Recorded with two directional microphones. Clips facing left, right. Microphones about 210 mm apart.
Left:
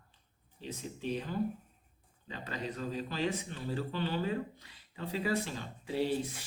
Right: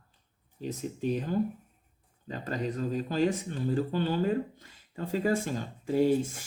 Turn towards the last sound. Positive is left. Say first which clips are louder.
# right 7 dB
turn(degrees=-45)  # may be behind; listen again after turning